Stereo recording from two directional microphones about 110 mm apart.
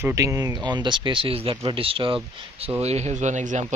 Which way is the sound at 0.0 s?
25° right (ahead or behind).